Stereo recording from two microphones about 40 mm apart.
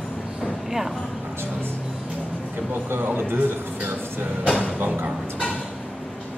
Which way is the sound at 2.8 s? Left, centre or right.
Right.